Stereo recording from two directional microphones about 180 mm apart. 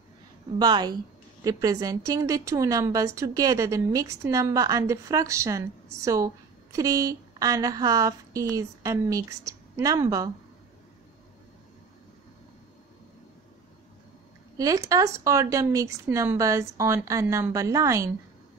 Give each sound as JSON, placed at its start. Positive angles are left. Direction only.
{"t": 0.6, "sound": "a woman's voice", "side_deg": -25}
{"t": 14.6, "sound": "speech", "side_deg": -20}